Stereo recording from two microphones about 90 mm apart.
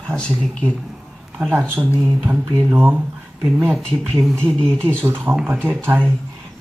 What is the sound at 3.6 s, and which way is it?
Speech, centre (ahead or behind).